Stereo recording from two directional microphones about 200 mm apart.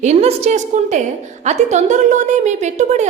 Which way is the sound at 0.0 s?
35° right (ahead or behind).